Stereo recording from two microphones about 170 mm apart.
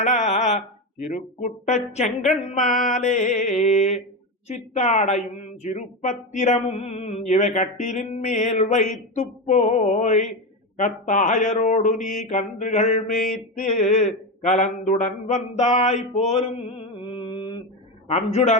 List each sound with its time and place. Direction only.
0.0 s a woman's voice: 45° left (ahead or behind)
11.9 s mantra: centre (ahead or behind)
12.3 s a woman's voice: 45° left (ahead or behind)
13.1 s mantra: centre (ahead or behind)
13.6 s a woman's voice: 45° left (ahead or behind)
15.5 s mantra: 45° left (ahead or behind); by 17.6 s 25° left (ahead or behind)
18.1 s a man's voice: 40° left (ahead or behind)